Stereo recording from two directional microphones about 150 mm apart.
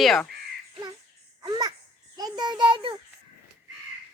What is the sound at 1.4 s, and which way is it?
Babbling, 30° right (ahead or behind).